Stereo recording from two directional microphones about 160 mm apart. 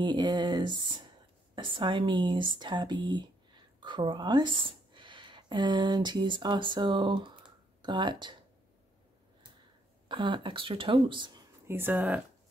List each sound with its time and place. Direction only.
0.0 s speech: 30° right (ahead or behind)
10.0 s speech: 30° right (ahead or behind)
11.6 s speech: 15° right (ahead or behind)